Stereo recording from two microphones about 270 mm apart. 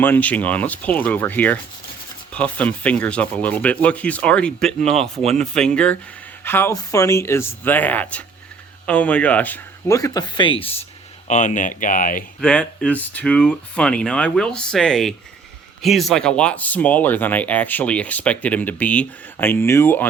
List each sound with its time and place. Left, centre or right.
0.0 s speech: centre; by 12.2 s left
12.4 s speech: centre